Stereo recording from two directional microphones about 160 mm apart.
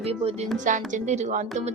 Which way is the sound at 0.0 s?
40° right (ahead or behind).